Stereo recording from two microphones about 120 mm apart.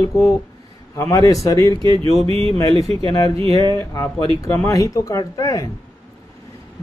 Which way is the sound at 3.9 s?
30° left (ahead or behind).